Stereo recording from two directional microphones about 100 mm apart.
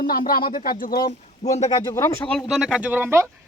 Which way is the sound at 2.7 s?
15° right (ahead or behind).